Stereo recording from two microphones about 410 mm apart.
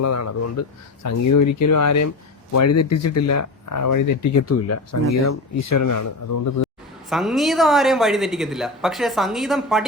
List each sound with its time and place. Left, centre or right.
0.0 s speech: left
7.1 s speech: centre